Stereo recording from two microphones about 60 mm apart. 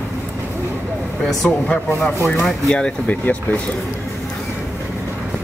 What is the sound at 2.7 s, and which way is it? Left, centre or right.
Speech, left.